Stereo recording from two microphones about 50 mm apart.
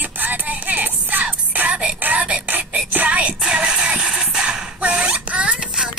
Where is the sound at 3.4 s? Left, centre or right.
Centre.